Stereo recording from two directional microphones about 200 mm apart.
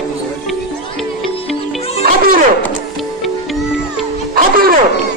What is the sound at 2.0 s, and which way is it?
Music, 50° right (ahead or behind).